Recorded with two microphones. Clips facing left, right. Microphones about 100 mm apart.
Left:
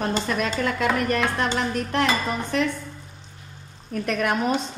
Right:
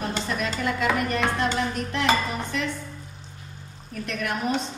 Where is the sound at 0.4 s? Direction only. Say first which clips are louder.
Left 2 dB; 55° left (ahead or behind).